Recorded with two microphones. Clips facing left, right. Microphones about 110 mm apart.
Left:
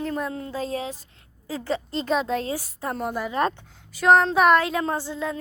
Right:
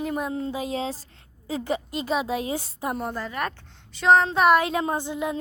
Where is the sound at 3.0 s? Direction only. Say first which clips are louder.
Left 5 dB; 10° left (ahead or behind).